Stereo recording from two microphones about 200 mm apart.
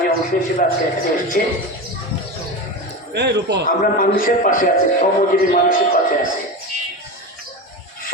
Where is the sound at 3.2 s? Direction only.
60° right (ahead or behind).